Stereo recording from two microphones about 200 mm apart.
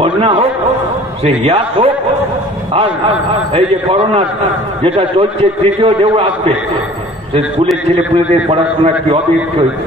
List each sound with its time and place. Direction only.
0.0 s a man's voice: 30° right (ahead or behind)
3.5 s a man's voice: 30° right (ahead or behind)
8.5 s a man's voice: 30° right (ahead or behind)